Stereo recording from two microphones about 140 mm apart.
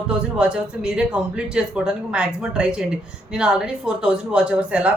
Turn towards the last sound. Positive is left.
turn(degrees=-10)  # may be behind; listen again after turning